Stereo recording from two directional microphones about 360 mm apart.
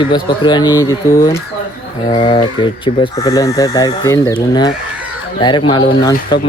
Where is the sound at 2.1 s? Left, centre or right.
Centre.